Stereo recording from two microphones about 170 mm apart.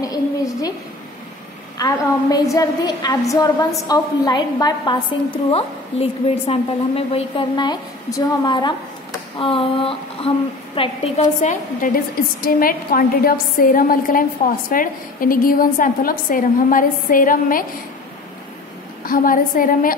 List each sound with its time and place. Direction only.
0.0 s a sound: 20° left (ahead or behind)
1.8 s a woman's voice: 20° left (ahead or behind); by 17.6 s 55° left (ahead or behind)
19.0 s a woman's voice: 55° left (ahead or behind)